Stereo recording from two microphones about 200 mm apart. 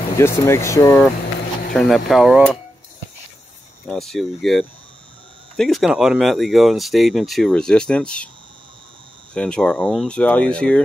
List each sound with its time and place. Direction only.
0.2 s speech: 15° left (ahead or behind)
1.7 s speech: centre (ahead or behind)
3.8 s speech: centre (ahead or behind)
9.3 s speech: 5° left (ahead or behind)